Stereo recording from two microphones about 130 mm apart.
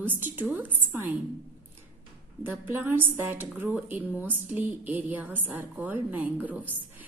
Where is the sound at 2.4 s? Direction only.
15° right (ahead or behind).